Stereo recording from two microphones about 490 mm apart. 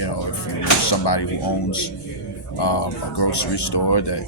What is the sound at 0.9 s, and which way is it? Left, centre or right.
Speech, left.